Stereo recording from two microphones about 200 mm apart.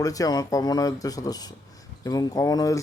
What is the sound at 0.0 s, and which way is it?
A man's voice, 15° left (ahead or behind).